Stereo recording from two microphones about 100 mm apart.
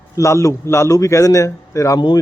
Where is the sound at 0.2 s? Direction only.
30° left (ahead or behind).